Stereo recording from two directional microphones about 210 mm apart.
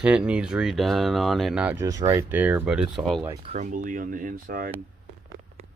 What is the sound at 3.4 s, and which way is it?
Speech, 35° right (ahead or behind).